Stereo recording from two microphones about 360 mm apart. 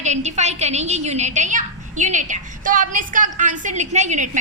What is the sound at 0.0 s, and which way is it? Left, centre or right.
A woman's voice, centre.